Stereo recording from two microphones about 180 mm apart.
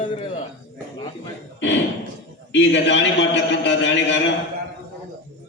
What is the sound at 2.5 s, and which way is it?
A man's voice, 80° left.